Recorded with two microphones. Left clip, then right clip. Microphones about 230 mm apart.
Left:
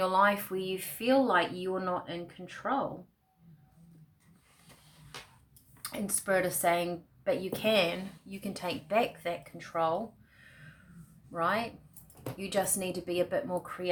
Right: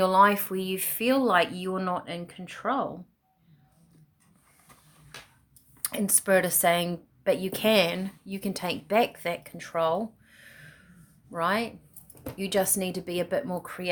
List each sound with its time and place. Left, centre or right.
0.0 s speech: right
5.8 s speech: right
10.3 s a sound: right
11.3 s speech: right